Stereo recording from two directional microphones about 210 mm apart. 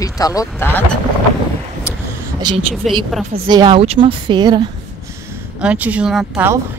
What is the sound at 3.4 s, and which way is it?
A woman's voice, 20° right (ahead or behind).